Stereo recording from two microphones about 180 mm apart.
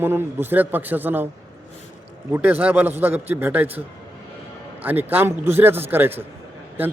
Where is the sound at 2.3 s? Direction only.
10° right (ahead or behind).